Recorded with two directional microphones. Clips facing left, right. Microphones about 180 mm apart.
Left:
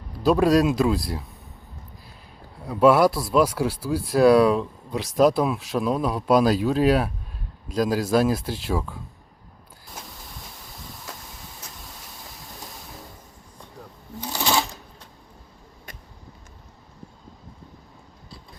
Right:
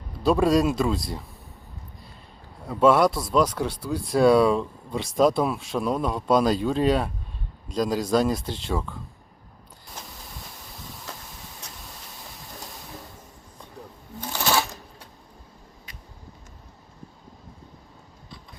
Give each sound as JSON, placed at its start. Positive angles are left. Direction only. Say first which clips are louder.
{"t": 0.2, "sound": "speech", "louder": "left 2 dB", "side_deg": 0}
{"t": 2.6, "sound": "speech", "louder": "left 2 dB", "side_deg": 0}
{"t": 14.2, "sound": "shuffling cards", "louder": "even", "side_deg": 10}
{"t": 15.9, "sound": "vehicle", "louder": "left 7 dB", "side_deg": 50}